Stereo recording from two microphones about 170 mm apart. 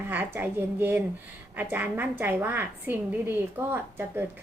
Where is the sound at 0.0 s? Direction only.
10° right (ahead or behind).